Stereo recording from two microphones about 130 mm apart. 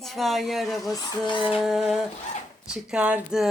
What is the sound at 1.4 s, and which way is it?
A woman's voice, 5° right (ahead or behind).